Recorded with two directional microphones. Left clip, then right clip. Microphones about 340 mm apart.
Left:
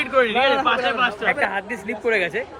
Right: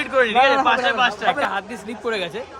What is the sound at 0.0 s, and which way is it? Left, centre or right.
A man's voice, right.